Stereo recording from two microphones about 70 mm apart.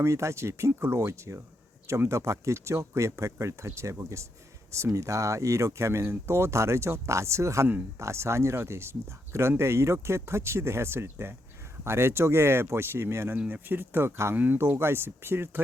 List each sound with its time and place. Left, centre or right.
0.0 s speech: right
13.5 s speech: right